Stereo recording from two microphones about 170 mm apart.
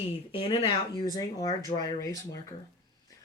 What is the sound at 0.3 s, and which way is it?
Speech, 35° left (ahead or behind).